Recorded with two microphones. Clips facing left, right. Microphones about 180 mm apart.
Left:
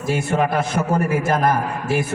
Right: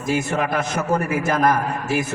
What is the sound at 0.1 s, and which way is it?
A man's voice, 30° left (ahead or behind).